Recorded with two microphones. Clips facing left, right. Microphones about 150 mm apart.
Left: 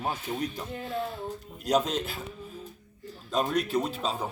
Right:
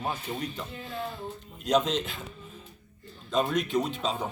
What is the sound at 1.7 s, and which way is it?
Speech, 5° left (ahead or behind).